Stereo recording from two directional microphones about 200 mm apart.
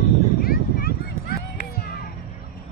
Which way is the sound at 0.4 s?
50° left (ahead or behind).